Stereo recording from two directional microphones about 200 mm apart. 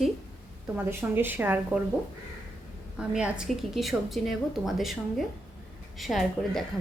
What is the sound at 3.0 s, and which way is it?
A woman's voice, 5° right (ahead or behind).